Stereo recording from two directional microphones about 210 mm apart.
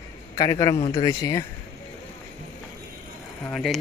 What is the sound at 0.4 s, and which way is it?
Speech, 15° left (ahead or behind).